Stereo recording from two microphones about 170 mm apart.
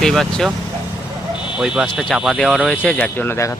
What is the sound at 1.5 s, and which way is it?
Speech, 5° right (ahead or behind).